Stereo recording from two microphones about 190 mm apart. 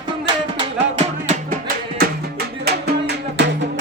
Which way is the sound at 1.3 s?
45° right (ahead or behind).